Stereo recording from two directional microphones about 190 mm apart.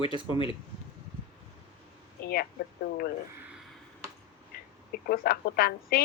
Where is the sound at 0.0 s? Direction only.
30° left (ahead or behind).